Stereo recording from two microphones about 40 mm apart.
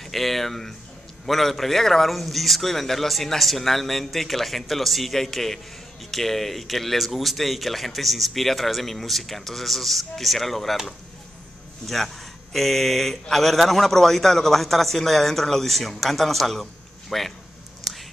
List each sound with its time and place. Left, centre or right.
0.0 s speech: centre
11.8 s speech: centre